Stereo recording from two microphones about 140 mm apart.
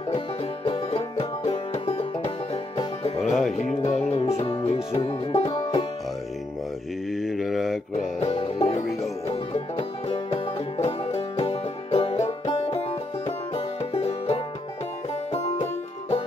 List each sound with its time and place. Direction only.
0.7 s music: 45° left (ahead or behind)
3.2 s music: centre (ahead or behind)
3.5 s music: 55° left (ahead or behind)
4.9 s banjo: 45° left (ahead or behind)
7.1 s mantra: centre (ahead or behind)
8.2 s music: 45° left (ahead or behind)
13.6 s music: 45° left (ahead or behind)